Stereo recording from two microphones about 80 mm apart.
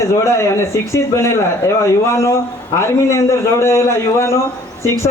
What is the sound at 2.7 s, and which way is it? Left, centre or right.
A man's voice, left.